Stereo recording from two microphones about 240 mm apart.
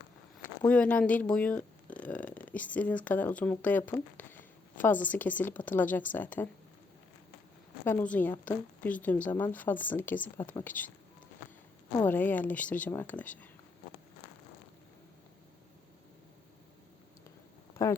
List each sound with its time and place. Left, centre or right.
0.7 s speech: centre
7.9 s a woman's voice: centre
11.9 s a woman's voice: centre
17.8 s a sound: centre